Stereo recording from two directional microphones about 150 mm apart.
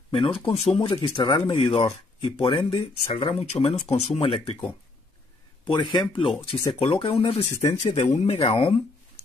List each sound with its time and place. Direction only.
0.5 s speech: 35° left (ahead or behind)
5.7 s speech: 30° left (ahead or behind)